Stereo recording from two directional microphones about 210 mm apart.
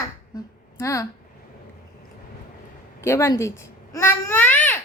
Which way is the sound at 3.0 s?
10° left (ahead or behind).